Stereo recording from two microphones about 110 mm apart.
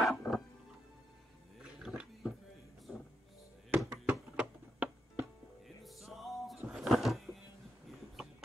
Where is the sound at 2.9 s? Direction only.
Centre (ahead or behind).